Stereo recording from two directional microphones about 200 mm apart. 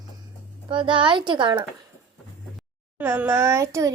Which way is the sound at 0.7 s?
25° right (ahead or behind).